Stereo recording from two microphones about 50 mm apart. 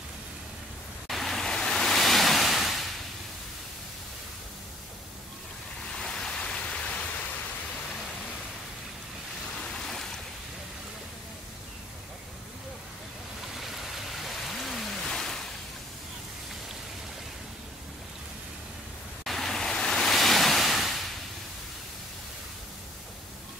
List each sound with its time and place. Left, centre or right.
1.0 s waves: centre
5.9 s waterfall: centre
9.6 s waves: centre
13.6 s a sound: centre
19.2 s waves: centre